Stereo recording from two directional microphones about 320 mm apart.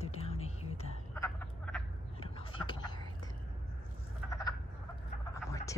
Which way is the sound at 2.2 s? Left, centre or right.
Centre.